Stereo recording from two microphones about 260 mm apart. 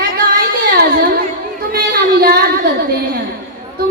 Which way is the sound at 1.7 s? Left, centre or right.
Right.